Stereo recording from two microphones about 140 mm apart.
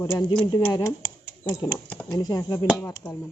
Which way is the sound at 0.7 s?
20° left (ahead or behind).